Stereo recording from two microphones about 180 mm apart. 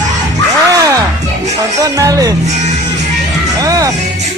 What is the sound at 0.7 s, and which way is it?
Music, 20° right (ahead or behind).